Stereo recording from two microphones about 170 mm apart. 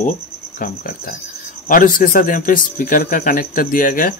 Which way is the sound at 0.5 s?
55° left (ahead or behind).